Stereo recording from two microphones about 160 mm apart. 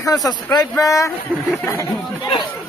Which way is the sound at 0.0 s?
25° left (ahead or behind).